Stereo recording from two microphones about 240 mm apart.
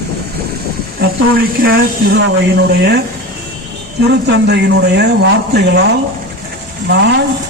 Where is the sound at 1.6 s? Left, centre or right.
Right.